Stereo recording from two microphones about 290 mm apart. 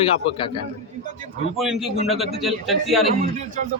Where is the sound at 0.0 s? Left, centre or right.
Centre.